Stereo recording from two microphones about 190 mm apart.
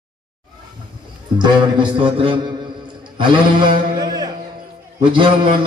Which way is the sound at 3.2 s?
25° right (ahead or behind).